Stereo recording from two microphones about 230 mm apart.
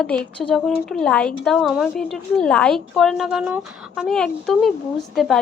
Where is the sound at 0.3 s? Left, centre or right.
Centre.